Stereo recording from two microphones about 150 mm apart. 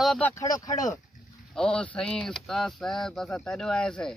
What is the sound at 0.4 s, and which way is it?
Speech, 25° left (ahead or behind).